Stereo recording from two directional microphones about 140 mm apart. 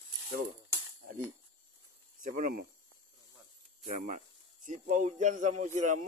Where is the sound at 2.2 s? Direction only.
70° right (ahead or behind).